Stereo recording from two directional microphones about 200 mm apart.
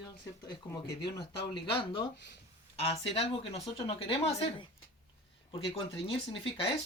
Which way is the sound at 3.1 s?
30° left (ahead or behind).